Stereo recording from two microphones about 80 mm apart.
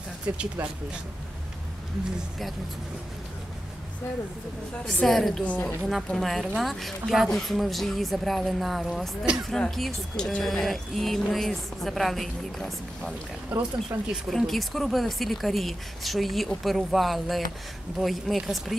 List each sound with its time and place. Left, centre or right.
4.8 s speech: centre
5.4 s a woman's voice: centre
5.8 s speech: centre
13.5 s speech: centre
13.9 s speech: right
14.3 s speech: centre